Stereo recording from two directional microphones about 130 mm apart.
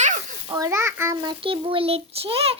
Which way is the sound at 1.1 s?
35° right (ahead or behind).